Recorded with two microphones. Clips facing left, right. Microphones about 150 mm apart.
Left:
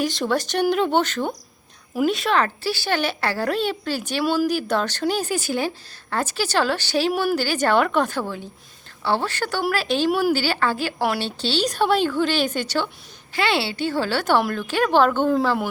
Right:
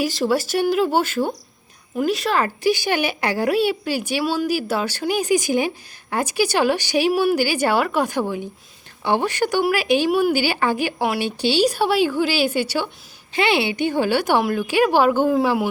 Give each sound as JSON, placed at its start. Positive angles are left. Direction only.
{"t": 0.0, "sound": "speech", "side_deg": -5}
{"t": 2.6, "sound": "a woman's voice", "side_deg": -15}
{"t": 7.1, "sound": "a woman's voice", "side_deg": 0}
{"t": 13.3, "sound": "a woman's voice", "side_deg": -20}